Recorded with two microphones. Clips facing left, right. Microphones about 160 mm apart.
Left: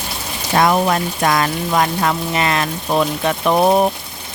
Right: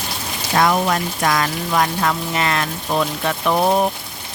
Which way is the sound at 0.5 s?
30° left (ahead or behind).